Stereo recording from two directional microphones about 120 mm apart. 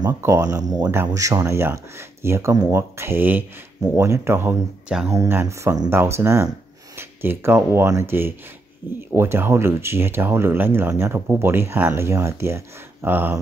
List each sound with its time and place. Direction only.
0.2 s speech: 25° right (ahead or behind)